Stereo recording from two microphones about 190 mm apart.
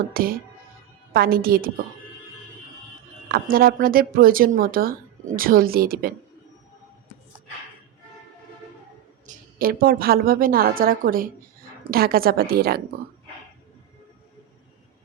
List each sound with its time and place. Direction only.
0.1 s speech: 50° right (ahead or behind)
3.3 s speech: 50° right (ahead or behind)
9.2 s speech: 50° right (ahead or behind)